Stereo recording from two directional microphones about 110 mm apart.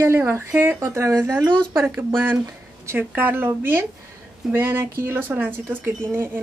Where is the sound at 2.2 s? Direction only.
25° right (ahead or behind).